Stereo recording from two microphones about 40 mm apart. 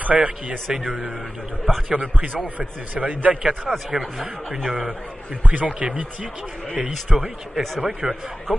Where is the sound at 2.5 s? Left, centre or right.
Right.